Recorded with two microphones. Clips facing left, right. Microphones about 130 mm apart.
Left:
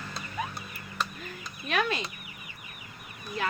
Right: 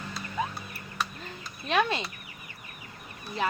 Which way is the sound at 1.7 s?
25° right (ahead or behind).